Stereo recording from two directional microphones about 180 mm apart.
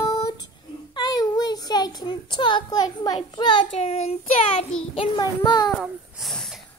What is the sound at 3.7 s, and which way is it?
Child singing, 35° left (ahead or behind).